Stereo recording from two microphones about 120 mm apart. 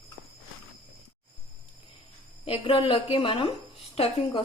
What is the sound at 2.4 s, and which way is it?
Speech, 50° left (ahead or behind).